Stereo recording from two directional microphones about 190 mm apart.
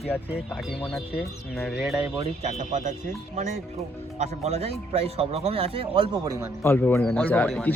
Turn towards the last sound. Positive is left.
turn(degrees=5)  # may be behind; listen again after turning